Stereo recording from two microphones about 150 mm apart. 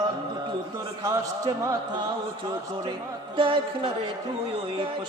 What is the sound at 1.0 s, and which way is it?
A man's voice, 20° right (ahead or behind).